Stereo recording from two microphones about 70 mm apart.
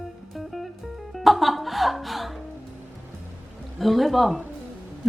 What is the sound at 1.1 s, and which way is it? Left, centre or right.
A woman's voice, centre.